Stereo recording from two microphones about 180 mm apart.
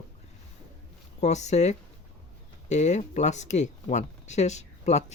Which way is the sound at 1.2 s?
40° left (ahead or behind).